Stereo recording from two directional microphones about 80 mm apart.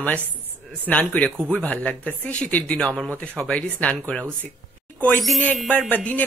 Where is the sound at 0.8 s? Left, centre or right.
Centre.